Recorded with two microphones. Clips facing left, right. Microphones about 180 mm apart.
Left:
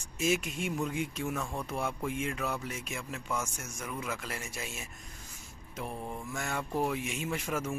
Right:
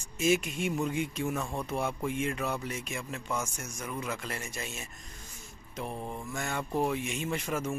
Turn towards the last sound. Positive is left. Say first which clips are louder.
# right 1 dB
turn(degrees=5)  # may be behind; listen again after turning